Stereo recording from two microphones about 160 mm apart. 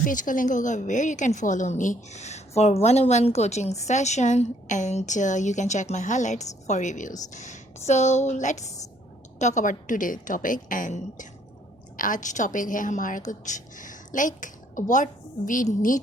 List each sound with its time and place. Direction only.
0.0 s a woman's voice: 55° left (ahead or behind)